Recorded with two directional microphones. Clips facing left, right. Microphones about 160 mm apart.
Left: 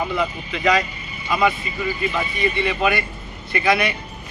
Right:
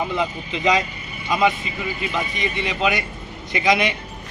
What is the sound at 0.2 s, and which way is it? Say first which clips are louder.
A man's voice: even; 20° right (ahead or behind).